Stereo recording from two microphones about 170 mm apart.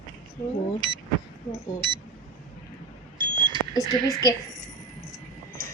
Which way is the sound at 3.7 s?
20° left (ahead or behind).